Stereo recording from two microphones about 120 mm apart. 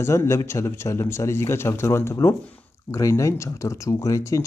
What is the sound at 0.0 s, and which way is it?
Speech, 25° left (ahead or behind).